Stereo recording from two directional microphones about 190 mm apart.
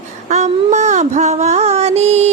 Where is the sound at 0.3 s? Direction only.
35° right (ahead or behind).